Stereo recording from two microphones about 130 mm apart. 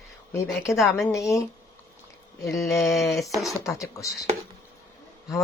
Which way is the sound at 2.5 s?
Centre (ahead or behind).